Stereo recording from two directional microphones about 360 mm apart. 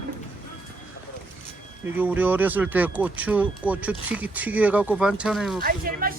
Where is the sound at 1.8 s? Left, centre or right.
Centre.